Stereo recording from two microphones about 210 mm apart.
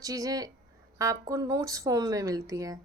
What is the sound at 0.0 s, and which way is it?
A woman's voice, 15° right (ahead or behind).